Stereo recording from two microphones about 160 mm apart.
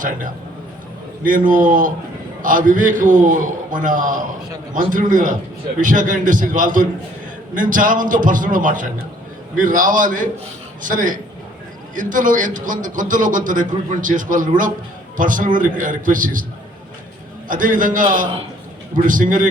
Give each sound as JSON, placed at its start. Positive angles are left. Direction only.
{"t": 1.2, "sound": "a man's voice", "side_deg": -60}
{"t": 17.5, "sound": "a man's voice", "side_deg": -55}